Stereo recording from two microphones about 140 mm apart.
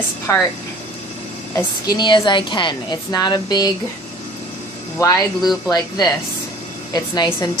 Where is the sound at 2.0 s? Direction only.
35° left (ahead or behind).